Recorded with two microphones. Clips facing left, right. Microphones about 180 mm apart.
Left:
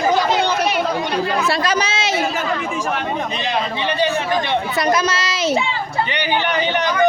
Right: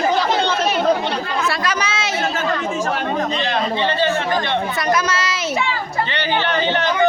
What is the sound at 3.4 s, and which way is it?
Speech, 15° left (ahead or behind).